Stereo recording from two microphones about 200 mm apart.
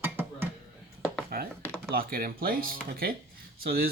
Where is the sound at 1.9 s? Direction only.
45° right (ahead or behind).